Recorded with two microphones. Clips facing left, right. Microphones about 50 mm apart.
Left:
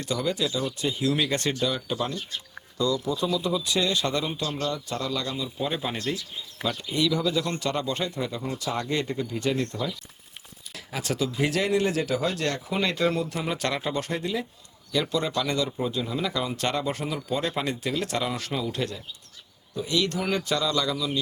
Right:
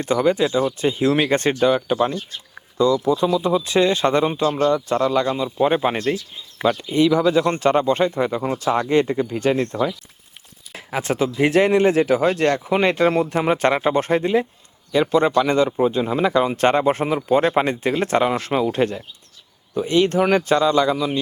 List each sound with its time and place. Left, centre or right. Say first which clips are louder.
0.0 s speech: right 9 dB; right
10.8 s speech: right 7 dB; right